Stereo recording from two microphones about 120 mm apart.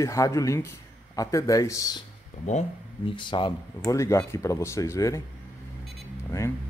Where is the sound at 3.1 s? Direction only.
40° left (ahead or behind).